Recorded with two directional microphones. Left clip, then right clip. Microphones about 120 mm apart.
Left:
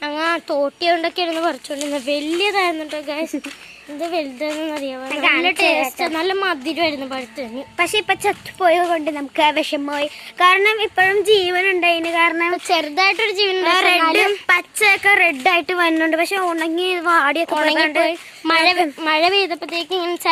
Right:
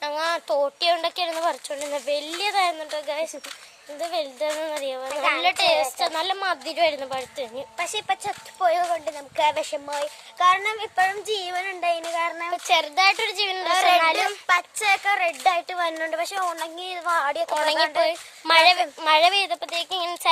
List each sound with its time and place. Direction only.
0.0 s a sound: 15° right (ahead or behind)
0.6 s a woman's voice: 25° right (ahead or behind)
4.4 s speech: 25° right (ahead or behind)
7.8 s a woman's voice: 45° left (ahead or behind)
12.7 s speech: 15° right (ahead or behind)
13.7 s a woman's voice: 40° left (ahead or behind)
17.5 s a woman's voice: 15° right (ahead or behind)
17.7 s a woman's voice: 25° left (ahead or behind)
18.0 s a woman's voice: 20° right (ahead or behind)